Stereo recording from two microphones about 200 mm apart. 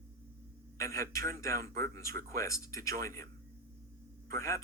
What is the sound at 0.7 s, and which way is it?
Speech, 15° left (ahead or behind).